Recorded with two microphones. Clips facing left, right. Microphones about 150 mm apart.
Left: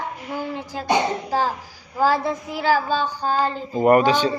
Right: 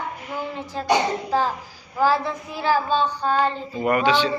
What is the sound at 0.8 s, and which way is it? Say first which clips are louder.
Speech: even; 35° left (ahead or behind).